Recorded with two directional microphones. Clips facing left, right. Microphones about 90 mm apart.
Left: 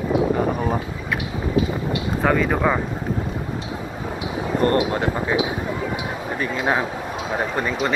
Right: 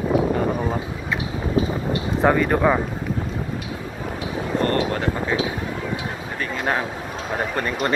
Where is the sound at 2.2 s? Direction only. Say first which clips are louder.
Right 2 dB; 5° right (ahead or behind).